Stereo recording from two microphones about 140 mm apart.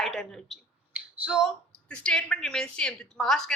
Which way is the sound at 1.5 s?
5° left (ahead or behind).